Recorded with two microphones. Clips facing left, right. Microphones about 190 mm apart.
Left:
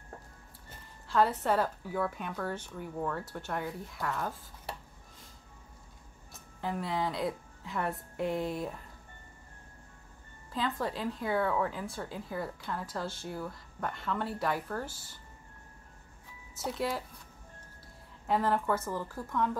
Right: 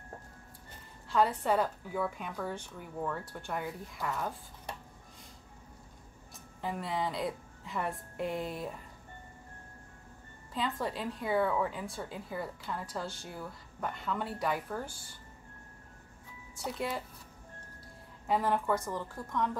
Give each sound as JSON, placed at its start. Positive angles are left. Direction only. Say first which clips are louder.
{"t": 1.0, "sound": "a woman's voice", "louder": "left 1 dB", "side_deg": 0}
{"t": 6.3, "sound": "a woman's voice", "louder": "left 2 dB", "side_deg": 0}
{"t": 10.5, "sound": "speech", "louder": "left 1 dB", "side_deg": 0}
{"t": 16.5, "sound": "speech", "louder": "left 2 dB", "side_deg": 0}
{"t": 18.2, "sound": "speech", "louder": "left 1 dB", "side_deg": 0}